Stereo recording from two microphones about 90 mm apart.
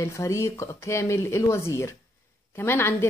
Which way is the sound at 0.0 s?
35° left (ahead or behind).